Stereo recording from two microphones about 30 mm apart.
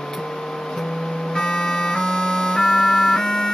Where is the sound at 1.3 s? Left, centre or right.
Left.